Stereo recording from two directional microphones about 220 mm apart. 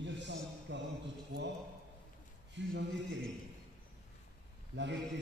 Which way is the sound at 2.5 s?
55° right (ahead or behind).